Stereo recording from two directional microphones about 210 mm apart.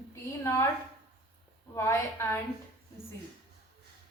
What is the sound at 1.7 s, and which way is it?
Speech, 15° left (ahead or behind).